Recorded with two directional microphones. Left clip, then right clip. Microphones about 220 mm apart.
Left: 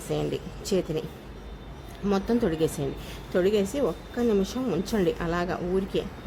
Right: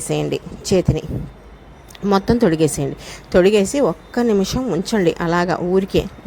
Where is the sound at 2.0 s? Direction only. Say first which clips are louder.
Right 10 dB; 30° right (ahead or behind).